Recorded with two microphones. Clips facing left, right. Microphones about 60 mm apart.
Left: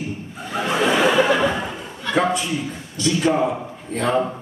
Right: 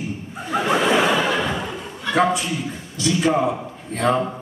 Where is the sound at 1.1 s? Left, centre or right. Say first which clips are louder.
Left 4 dB; centre.